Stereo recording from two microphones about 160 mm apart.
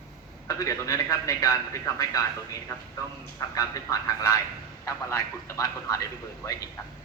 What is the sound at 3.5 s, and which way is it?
A man's voice, 20° left (ahead or behind).